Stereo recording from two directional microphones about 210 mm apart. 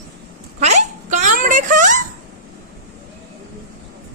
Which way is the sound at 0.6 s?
35° right (ahead or behind).